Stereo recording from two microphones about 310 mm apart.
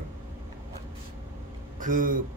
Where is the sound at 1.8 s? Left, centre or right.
Right.